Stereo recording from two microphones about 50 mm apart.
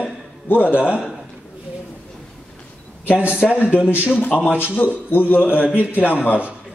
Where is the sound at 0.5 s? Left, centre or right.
Left.